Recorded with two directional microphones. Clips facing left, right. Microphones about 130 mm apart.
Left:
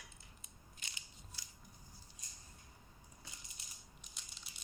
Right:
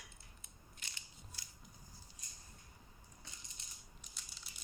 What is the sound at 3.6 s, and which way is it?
Coin, 5° left (ahead or behind).